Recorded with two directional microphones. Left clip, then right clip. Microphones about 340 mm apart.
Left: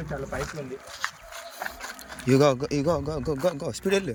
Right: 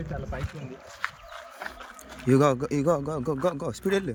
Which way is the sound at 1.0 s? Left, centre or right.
Left.